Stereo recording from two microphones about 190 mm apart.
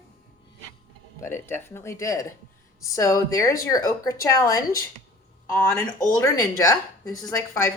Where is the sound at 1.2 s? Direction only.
10° left (ahead or behind).